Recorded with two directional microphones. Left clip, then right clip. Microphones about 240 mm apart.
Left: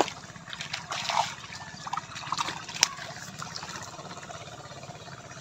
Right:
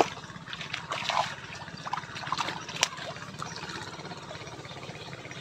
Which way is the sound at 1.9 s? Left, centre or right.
Centre.